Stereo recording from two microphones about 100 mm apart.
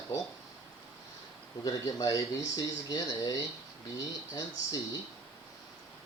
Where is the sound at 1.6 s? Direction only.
35° left (ahead or behind).